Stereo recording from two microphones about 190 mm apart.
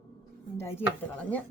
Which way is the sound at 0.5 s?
15° left (ahead or behind).